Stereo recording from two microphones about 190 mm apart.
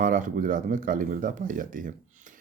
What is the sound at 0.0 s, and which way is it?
Speech, 45° right (ahead or behind).